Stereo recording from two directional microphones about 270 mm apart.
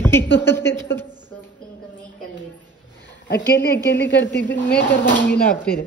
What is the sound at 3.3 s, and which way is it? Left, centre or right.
A woman's voice, left.